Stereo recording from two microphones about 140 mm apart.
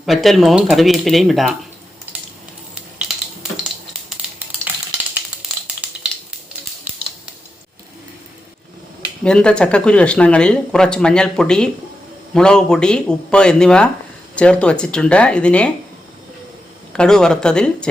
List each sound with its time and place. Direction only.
0.0 s speech: centre (ahead or behind)
4.2 s a sound: 10° right (ahead or behind)
9.2 s speech: 5° left (ahead or behind)
16.9 s speech: 5° left (ahead or behind)